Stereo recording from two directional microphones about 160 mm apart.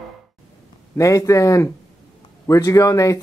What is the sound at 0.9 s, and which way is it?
Speech, 20° left (ahead or behind).